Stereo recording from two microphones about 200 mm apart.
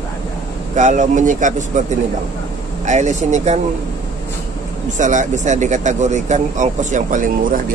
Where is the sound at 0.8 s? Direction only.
35° right (ahead or behind).